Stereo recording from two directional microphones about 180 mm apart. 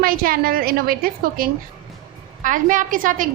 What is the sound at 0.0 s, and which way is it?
A woman's voice, 55° right (ahead or behind).